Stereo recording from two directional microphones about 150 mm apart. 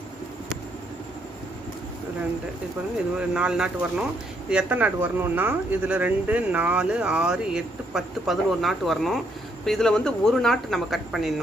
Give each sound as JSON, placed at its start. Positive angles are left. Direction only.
{"t": 3.2, "sound": "speech", "side_deg": -5}